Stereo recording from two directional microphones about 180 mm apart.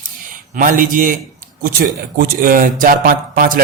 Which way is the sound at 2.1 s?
50° right (ahead or behind).